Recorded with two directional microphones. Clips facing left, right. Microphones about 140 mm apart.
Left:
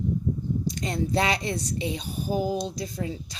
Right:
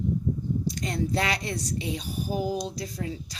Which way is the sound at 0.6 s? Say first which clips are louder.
Left 1 dB; 25° left (ahead or behind).